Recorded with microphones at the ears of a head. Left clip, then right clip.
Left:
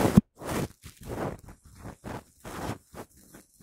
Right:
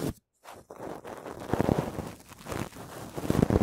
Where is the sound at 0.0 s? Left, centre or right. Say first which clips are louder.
Left 12 dB; left.